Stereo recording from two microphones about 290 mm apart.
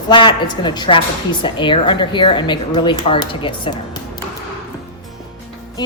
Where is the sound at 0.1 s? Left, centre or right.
Centre.